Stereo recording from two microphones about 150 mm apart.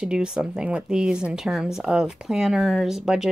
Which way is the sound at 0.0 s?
5° right (ahead or behind).